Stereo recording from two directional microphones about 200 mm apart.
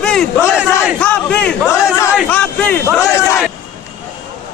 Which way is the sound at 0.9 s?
5° left (ahead or behind).